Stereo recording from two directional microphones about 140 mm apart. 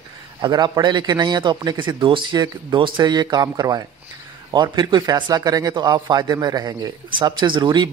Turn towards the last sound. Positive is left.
turn(degrees=-30)  # may be behind; listen again after turning